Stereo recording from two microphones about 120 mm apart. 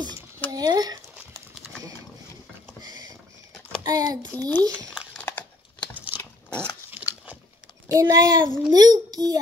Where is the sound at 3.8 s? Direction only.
30° right (ahead or behind).